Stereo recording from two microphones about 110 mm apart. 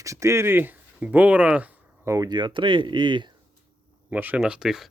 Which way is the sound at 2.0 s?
30° right (ahead or behind).